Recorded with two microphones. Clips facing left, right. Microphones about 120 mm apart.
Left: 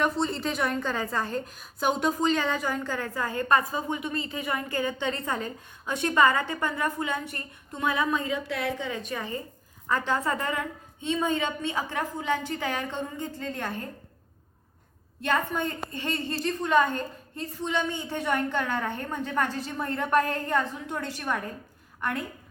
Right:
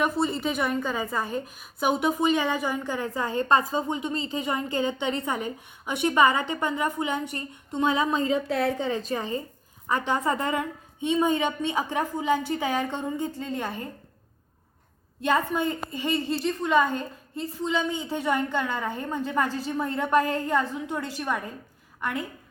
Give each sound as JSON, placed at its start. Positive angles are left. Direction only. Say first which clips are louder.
{"t": 0.0, "sound": "a woman's voice", "louder": "right 2 dB", "side_deg": -5}
{"t": 15.2, "sound": "a woman's voice", "louder": "right 3 dB", "side_deg": -15}